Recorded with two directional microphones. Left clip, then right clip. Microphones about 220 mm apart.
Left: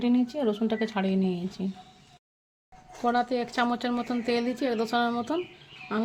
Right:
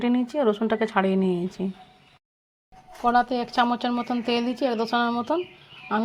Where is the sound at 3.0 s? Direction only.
5° right (ahead or behind).